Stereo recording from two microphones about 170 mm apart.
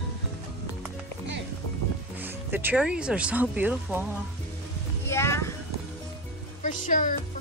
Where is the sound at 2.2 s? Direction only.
10° right (ahead or behind).